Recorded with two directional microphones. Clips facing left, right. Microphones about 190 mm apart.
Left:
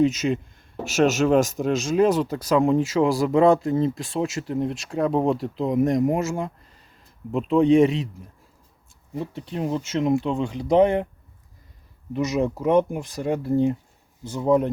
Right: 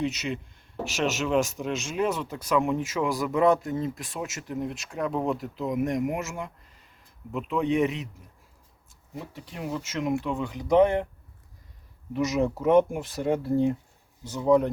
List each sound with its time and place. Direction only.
0.0 s speech: 40° left (ahead or behind)
9.1 s speech: 30° left (ahead or behind)
12.1 s speech: 20° left (ahead or behind)